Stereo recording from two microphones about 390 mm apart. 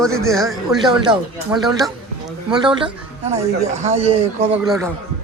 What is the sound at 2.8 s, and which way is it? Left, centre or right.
Speech, centre.